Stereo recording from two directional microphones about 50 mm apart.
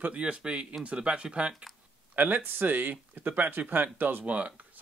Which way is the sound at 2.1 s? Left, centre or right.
Right.